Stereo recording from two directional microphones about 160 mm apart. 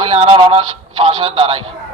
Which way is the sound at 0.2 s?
35° right (ahead or behind).